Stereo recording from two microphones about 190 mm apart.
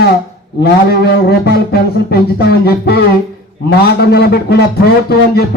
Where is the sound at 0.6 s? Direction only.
55° left (ahead or behind).